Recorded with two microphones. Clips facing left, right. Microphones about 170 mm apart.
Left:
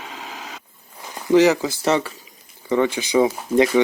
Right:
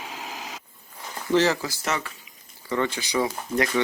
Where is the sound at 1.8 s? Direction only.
30° left (ahead or behind).